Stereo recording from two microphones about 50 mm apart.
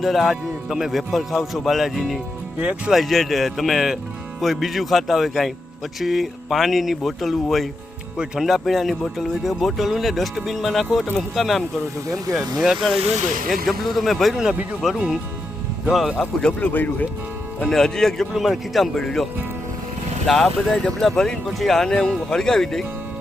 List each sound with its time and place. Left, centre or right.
0.0 s speech: centre
2.6 s speech: right
2.9 s speech: centre
8.4 s speech: centre
16.4 s speech: left
16.7 s speech: left
17.7 s speech: centre
18.3 s speech: centre
18.8 s speech: centre
21.8 s speech: centre